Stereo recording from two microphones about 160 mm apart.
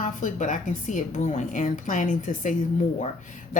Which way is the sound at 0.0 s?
50° left (ahead or behind).